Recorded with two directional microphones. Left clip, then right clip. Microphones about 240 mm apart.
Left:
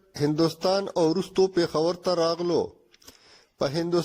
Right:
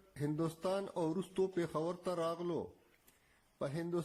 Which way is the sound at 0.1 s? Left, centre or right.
Left.